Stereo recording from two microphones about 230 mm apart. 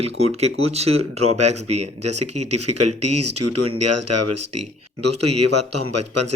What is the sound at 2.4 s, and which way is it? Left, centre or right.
Speech, right.